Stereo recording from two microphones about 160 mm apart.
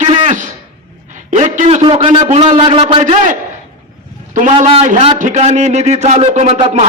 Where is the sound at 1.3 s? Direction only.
45° right (ahead or behind).